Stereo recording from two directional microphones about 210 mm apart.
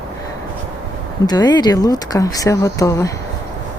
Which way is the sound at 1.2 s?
20° left (ahead or behind).